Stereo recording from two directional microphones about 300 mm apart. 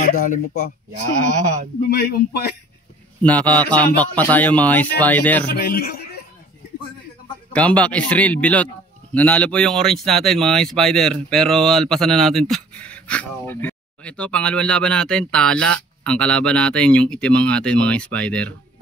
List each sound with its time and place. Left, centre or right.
0.0 s speech: left
1.8 s speech: left
3.2 s speech: centre
5.5 s speech: left
7.5 s speech: centre